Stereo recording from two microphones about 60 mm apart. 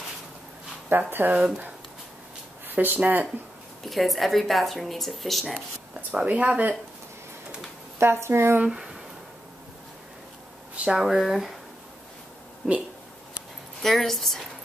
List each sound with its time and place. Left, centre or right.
0.8 s speech: right
1.3 s speech: right
2.7 s speech: right
3.9 s speech: centre
6.2 s speech: centre
8.0 s a woman's voice: right
8.6 s speech: centre
10.8 s speech: centre
12.6 s speech: centre